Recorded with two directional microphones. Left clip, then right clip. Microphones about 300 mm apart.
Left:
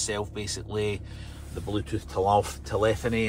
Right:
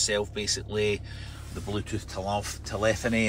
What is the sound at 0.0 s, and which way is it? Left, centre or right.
Speech, centre.